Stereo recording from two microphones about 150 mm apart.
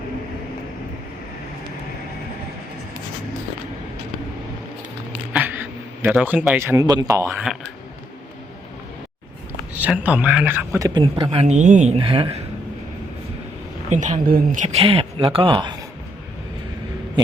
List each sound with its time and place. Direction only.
5.3 s a man's voice: 10° right (ahead or behind)
7.3 s speech: 5° right (ahead or behind)
9.7 s speech: 10° right (ahead or behind)
10.8 s a man's voice: 25° right (ahead or behind)
11.0 s speech: 35° right (ahead or behind)
11.9 s a woman's voice: 35° right (ahead or behind)
13.9 s speech: 55° right (ahead or behind); by 15.5 s 35° right (ahead or behind)